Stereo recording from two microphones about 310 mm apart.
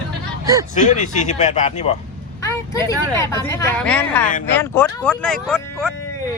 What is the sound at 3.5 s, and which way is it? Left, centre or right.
Speech, centre.